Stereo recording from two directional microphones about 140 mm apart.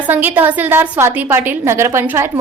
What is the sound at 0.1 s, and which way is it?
A woman's voice, 15° right (ahead or behind).